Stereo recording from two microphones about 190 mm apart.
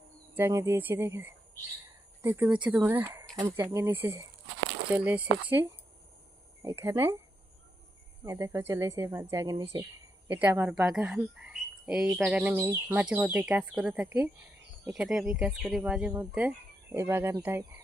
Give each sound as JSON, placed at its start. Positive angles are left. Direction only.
{"t": 0.3, "sound": "a woman's voice", "side_deg": -10}
{"t": 8.2, "sound": "a woman's voice", "side_deg": -15}